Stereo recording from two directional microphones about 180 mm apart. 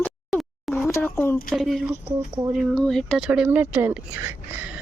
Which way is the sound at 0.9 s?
15° left (ahead or behind).